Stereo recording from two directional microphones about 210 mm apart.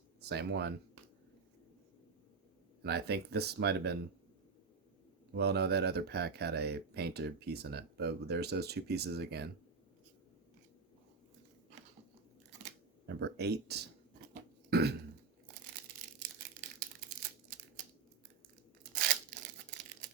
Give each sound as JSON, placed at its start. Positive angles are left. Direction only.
{"t": 0.3, "sound": "speech", "side_deg": -50}
{"t": 2.8, "sound": "speech", "side_deg": -50}
{"t": 5.3, "sound": "speech", "side_deg": -50}
{"t": 13.1, "sound": "speech", "side_deg": -50}
{"t": 14.7, "sound": "burping", "side_deg": -50}
{"t": 18.8, "sound": "a sound", "side_deg": -40}